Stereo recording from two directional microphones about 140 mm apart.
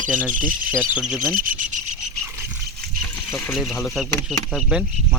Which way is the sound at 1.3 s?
75° right (ahead or behind).